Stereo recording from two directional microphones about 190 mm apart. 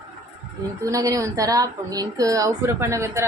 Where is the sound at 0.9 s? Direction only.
15° right (ahead or behind).